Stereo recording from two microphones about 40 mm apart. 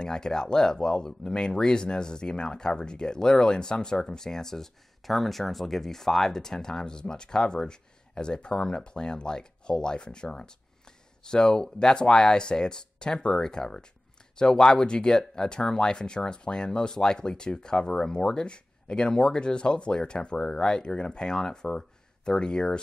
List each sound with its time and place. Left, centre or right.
0.0 s speech: centre